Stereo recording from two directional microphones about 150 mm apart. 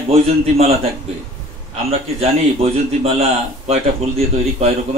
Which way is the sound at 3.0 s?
45° right (ahead or behind).